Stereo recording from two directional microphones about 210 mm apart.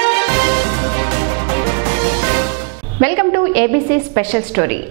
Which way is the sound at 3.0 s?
15° right (ahead or behind).